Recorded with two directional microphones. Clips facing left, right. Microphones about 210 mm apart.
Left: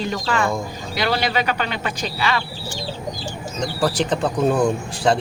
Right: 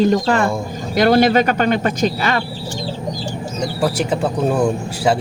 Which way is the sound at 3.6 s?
10° right (ahead or behind).